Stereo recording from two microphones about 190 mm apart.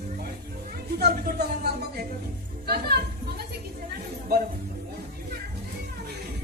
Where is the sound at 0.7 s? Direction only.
55° right (ahead or behind).